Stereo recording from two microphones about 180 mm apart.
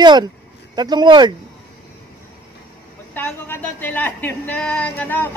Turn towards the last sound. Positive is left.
turn(degrees=10)  # may be behind; listen again after turning